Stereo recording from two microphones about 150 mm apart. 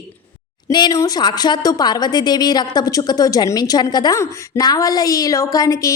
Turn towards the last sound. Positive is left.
turn(degrees=20)  # may be behind; listen again after turning